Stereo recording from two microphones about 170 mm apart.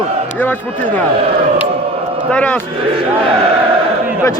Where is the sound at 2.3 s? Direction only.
10° left (ahead or behind).